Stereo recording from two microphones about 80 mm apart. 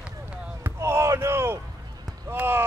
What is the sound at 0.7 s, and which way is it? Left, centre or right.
Basketball bounce, right.